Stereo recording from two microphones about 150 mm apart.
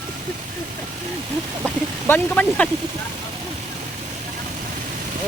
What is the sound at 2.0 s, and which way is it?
Speech, 10° left (ahead or behind).